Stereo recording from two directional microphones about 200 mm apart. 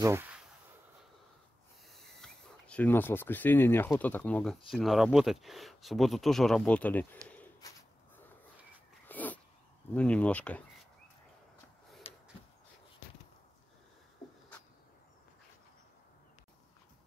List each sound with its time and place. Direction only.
0.0 s a sound: 10° right (ahead or behind)
1.9 s speech: centre (ahead or behind)
7.2 s bird: 10° left (ahead or behind)
9.0 s cat: 10° left (ahead or behind)
9.9 s speech: 5° left (ahead or behind)
12.1 s a sound: 30° left (ahead or behind)